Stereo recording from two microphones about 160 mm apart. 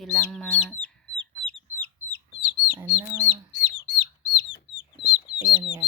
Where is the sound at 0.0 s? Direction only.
Centre (ahead or behind).